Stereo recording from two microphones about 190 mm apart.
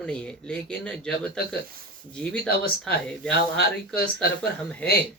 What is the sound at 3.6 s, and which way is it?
Speech, 55° left (ahead or behind).